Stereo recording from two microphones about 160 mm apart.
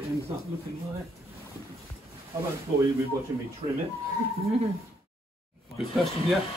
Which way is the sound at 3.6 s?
35° right (ahead or behind).